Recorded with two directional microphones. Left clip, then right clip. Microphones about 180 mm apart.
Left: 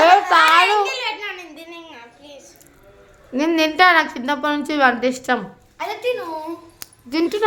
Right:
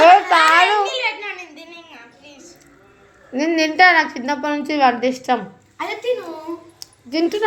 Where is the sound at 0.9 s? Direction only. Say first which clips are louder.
Right 2 dB; 35° left (ahead or behind).